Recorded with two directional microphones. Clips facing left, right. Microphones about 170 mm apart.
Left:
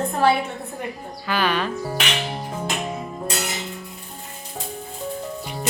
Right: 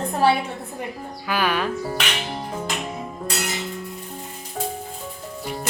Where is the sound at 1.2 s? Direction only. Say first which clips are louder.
Even; 10° right (ahead or behind).